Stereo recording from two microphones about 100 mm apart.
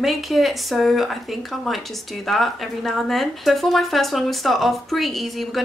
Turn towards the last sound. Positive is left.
turn(degrees=0)  # may be behind; listen again after turning